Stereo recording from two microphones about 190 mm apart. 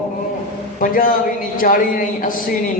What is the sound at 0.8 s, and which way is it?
A man's voice, 45° left (ahead or behind).